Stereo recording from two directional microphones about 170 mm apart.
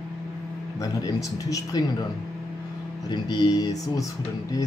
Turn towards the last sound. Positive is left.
turn(degrees=20)  # may be behind; listen again after turning